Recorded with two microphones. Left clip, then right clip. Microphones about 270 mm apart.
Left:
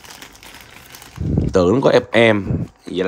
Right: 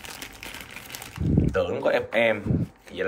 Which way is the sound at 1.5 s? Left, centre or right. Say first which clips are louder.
Left 11 dB; left.